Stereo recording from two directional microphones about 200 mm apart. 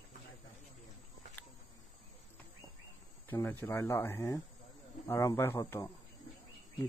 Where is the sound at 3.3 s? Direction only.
10° left (ahead or behind).